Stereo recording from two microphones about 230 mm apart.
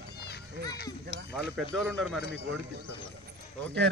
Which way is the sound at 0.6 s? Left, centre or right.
Right.